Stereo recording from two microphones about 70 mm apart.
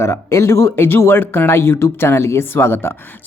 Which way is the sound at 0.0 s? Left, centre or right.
Left.